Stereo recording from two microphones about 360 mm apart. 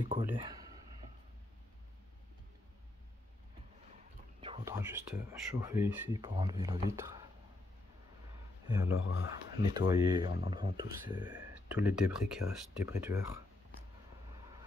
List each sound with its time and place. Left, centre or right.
0.0 s speech: centre
4.4 s speech: centre
8.6 s speech: centre
8.9 s speech: left
9.6 s speech: centre